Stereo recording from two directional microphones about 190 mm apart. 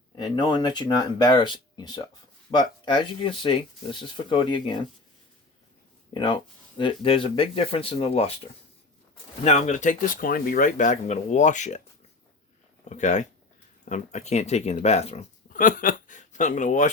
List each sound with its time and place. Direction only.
0.2 s speech: 20° left (ahead or behind)
6.1 s speech: 25° left (ahead or behind)
9.4 s speech: 35° left (ahead or behind)
12.9 s speech: 40° left (ahead or behind)